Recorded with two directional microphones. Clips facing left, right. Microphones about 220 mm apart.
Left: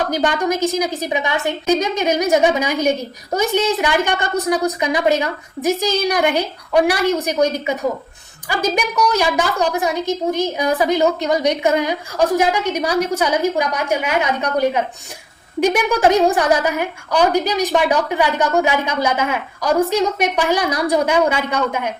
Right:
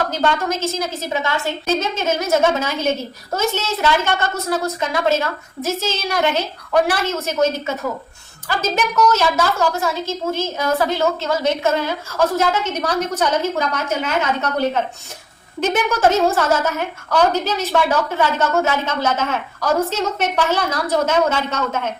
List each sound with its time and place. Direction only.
0.1 s a woman's voice: 15° left (ahead or behind)